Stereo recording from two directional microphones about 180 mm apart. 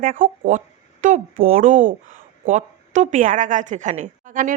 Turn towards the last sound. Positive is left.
turn(degrees=-45)  # may be behind; listen again after turning